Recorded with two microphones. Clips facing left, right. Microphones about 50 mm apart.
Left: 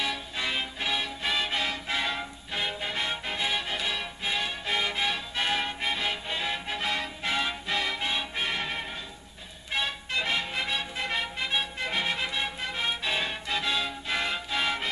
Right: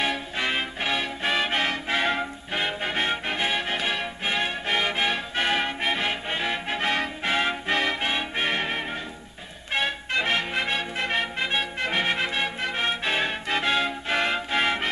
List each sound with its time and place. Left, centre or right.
0.0 s music: right